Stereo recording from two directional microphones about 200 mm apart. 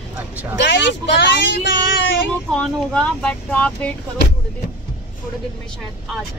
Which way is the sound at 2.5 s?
5° left (ahead or behind).